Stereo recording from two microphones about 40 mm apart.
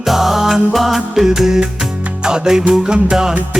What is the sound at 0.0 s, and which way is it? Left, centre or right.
Music, centre.